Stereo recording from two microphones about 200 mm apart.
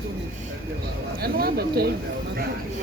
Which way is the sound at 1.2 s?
50° right (ahead or behind).